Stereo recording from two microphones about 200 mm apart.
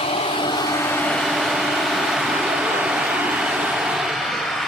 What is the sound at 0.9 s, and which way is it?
Vehicle, 5° left (ahead or behind).